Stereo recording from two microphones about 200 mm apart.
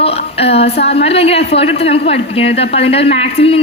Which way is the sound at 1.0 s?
30° left (ahead or behind).